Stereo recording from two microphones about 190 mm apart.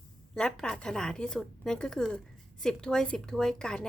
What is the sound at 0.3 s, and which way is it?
Speech, 5° left (ahead or behind).